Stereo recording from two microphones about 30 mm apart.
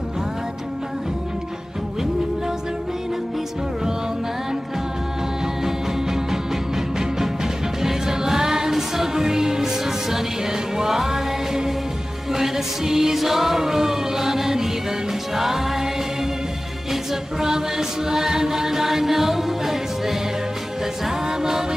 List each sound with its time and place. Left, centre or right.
5.6 s music: centre
16.9 s music: centre
21.3 s a capella: centre